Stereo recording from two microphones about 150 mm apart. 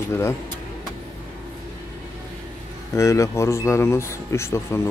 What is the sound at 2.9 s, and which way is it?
A man's voice, 20° left (ahead or behind).